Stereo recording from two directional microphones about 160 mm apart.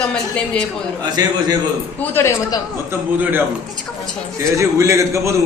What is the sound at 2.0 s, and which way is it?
Speech, 15° left (ahead or behind).